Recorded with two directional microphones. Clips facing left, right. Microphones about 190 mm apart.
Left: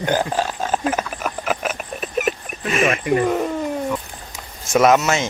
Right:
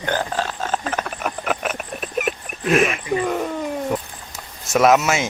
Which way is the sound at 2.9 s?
Centre (ahead or behind).